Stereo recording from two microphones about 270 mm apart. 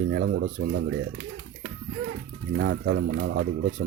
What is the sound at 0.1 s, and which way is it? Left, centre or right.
Speech, right.